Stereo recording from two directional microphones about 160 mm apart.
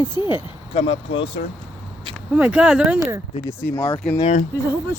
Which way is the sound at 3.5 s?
15° left (ahead or behind).